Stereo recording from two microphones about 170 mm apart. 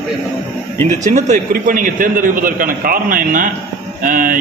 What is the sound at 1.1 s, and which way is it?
A man's voice, 50° right (ahead or behind).